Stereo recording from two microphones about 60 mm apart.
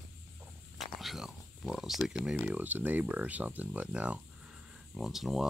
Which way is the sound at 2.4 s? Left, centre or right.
Right.